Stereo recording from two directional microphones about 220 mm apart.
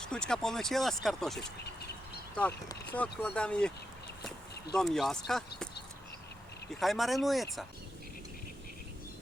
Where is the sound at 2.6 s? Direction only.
5° left (ahead or behind).